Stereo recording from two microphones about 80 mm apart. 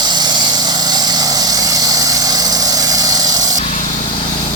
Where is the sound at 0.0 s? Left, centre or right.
Right.